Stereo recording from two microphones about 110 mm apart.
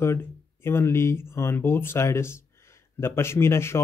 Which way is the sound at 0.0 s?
20° left (ahead or behind).